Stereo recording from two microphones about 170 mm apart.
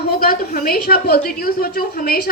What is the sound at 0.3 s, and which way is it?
A woman's voice, 60° left (ahead or behind).